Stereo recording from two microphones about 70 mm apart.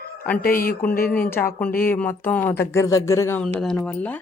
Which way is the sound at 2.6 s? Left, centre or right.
Left.